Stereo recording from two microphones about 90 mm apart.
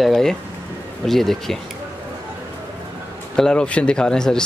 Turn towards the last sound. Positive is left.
turn(degrees=5)  # may be behind; listen again after turning